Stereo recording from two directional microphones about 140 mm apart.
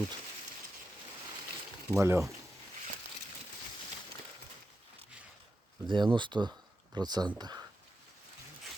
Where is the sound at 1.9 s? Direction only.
20° right (ahead or behind).